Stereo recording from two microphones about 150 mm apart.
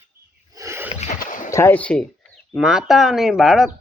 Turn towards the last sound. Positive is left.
turn(degrees=0)  # may be behind; listen again after turning